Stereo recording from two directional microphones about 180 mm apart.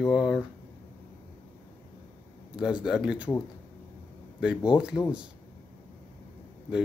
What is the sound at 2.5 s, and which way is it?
Speech, 5° right (ahead or behind).